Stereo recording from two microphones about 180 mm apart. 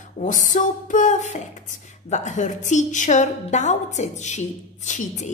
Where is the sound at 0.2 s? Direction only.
45° left (ahead or behind).